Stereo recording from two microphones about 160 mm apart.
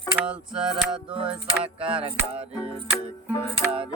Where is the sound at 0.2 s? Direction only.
5° right (ahead or behind).